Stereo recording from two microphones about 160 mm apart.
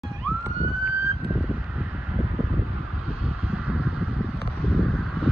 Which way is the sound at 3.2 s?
5° right (ahead or behind).